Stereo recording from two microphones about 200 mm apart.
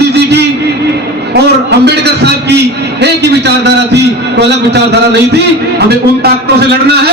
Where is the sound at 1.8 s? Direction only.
55° right (ahead or behind).